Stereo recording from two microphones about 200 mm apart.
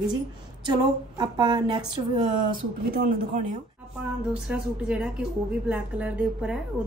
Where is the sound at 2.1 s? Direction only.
40° right (ahead or behind).